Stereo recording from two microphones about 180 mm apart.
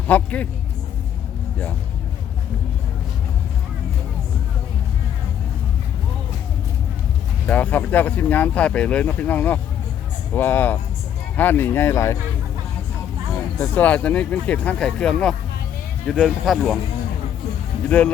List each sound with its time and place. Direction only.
0.1 s speech: 10° left (ahead or behind)
7.4 s speech: 10° left (ahead or behind)
13.3 s speech: 10° left (ahead or behind)
17.8 s speech: 5° left (ahead or behind)